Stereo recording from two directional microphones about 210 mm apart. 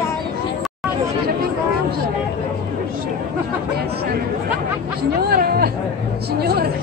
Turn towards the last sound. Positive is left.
turn(degrees=-50)  # may be behind; listen again after turning